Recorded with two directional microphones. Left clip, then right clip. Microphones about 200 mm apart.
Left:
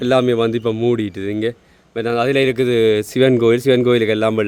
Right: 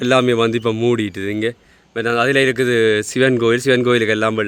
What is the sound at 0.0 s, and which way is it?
Speech, centre (ahead or behind).